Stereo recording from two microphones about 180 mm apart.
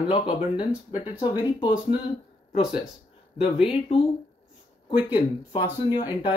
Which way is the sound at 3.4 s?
30° left (ahead or behind).